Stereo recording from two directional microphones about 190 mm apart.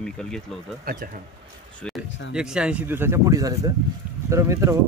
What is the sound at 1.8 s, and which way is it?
Speech, 5° left (ahead or behind).